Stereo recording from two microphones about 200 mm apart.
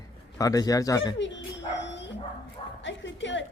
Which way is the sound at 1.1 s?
65° left (ahead or behind).